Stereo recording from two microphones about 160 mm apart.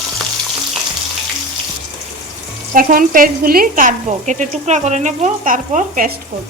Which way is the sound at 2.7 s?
60° right (ahead or behind).